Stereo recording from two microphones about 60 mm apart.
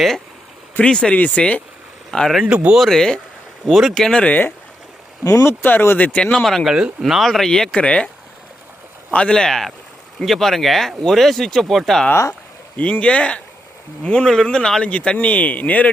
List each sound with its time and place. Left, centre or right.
0.8 s speech: centre
2.0 s speech: centre
2.4 s speech: centre
2.7 s speech: centre
4.2 s speech: left
6.3 s speech: centre
6.7 s speech: centre
7.0 s speech: centre
9.1 s speech: centre
12.7 s speech: left